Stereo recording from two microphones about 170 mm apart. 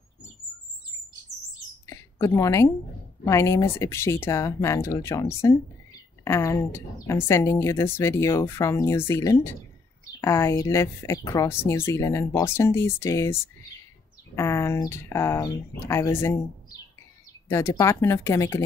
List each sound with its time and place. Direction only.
1.9 s a sound: 15° left (ahead or behind)
3.3 s a woman's voice: 15° left (ahead or behind)
17.5 s a woman's voice: 15° left (ahead or behind)